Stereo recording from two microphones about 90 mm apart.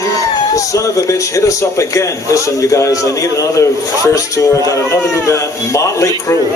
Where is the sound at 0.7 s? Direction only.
35° left (ahead or behind).